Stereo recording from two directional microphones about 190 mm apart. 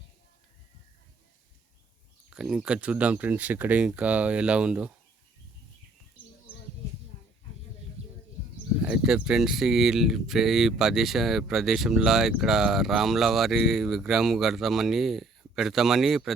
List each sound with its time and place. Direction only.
2.3 s speech: 5° right (ahead or behind)
8.0 s bird: 35° right (ahead or behind)
8.8 s speech: 5° right (ahead or behind)